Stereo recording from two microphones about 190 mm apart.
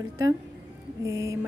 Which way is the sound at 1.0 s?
15° right (ahead or behind).